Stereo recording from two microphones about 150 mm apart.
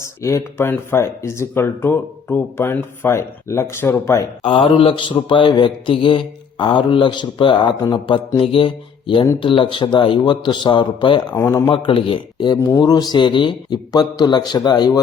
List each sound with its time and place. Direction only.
0.0 s speech: 20° left (ahead or behind)
4.4 s speech: 35° left (ahead or behind)
11.4 s a man's voice: 20° left (ahead or behind)
11.7 s speech: 35° left (ahead or behind)
12.5 s a man's voice: 20° left (ahead or behind)